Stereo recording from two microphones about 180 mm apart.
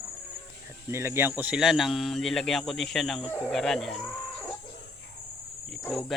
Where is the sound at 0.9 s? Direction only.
15° right (ahead or behind); by 4.0 s centre (ahead or behind).